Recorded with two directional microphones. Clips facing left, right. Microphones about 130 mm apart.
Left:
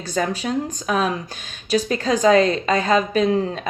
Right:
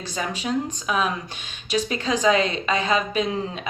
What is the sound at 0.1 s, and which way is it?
A woman's voice, 45° left (ahead or behind).